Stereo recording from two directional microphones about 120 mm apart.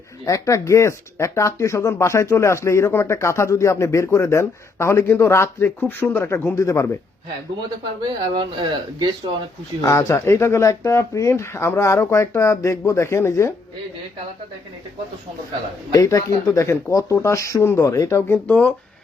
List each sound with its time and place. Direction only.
0.3 s speech: 25° left (ahead or behind)
8.0 s speech: 45° right (ahead or behind)
9.8 s speech: 25° left (ahead or behind)
15.9 s speech: 25° left (ahead or behind)
18.4 s speech: 10° left (ahead or behind)